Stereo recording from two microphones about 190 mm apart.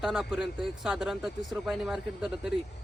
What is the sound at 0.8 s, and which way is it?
Speech, 5° right (ahead or behind).